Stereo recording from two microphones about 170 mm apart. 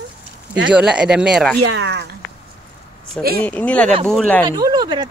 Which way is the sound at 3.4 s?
10° left (ahead or behind).